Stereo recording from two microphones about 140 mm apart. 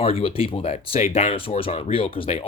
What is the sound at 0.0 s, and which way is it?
Speech, 45° left (ahead or behind).